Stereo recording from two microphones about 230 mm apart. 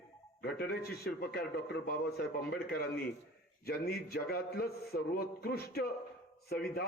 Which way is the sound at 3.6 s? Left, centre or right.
Left.